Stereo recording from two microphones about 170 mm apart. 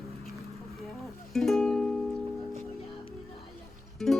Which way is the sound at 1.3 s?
Centre (ahead or behind).